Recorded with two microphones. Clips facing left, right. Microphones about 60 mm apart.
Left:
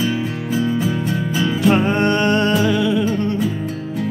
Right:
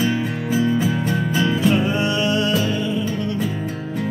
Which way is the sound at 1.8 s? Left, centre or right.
Left.